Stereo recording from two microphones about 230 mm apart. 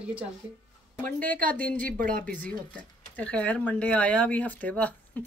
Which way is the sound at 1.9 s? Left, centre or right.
Right.